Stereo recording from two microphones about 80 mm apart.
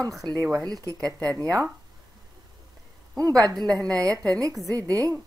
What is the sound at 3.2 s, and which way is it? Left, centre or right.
A woman's voice, right.